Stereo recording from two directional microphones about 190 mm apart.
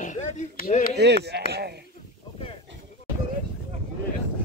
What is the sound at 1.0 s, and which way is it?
Speech, 60° right (ahead or behind).